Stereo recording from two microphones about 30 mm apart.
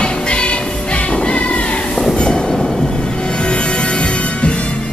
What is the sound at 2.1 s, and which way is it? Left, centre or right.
Train, left.